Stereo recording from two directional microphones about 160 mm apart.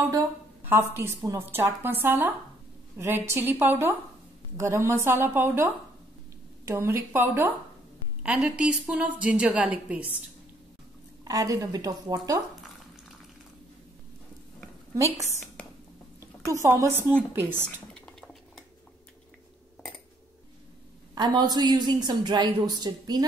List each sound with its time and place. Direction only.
0.7 s a woman's voice: 15° right (ahead or behind)
11.2 s a woman's voice: 25° right (ahead or behind)
16.2 s a woman's voice: 15° right (ahead or behind)
17.9 s cutlery: 5° left (ahead or behind)
21.1 s a woman's voice: 25° right (ahead or behind)